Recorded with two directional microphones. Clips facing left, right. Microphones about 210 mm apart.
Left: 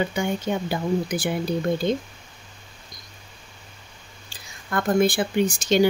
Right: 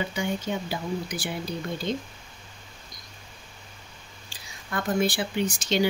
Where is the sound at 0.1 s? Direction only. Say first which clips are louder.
Left 4 dB; 50° left (ahead or behind).